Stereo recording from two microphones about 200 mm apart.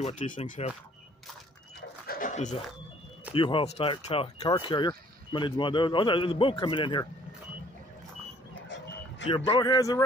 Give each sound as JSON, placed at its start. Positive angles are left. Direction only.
{"t": 0.0, "sound": "speech", "side_deg": 40}
{"t": 2.0, "sound": "dog", "side_deg": 40}
{"t": 3.3, "sound": "speech", "side_deg": 25}
{"t": 8.6, "sound": "vehicle", "side_deg": 65}
{"t": 9.5, "sound": "speech", "side_deg": 20}